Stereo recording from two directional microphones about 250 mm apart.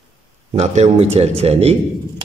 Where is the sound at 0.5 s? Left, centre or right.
Right.